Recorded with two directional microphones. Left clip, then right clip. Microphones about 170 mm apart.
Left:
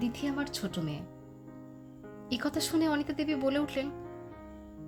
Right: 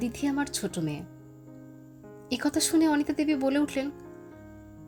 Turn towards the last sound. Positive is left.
turn(degrees=-20)  # may be behind; listen again after turning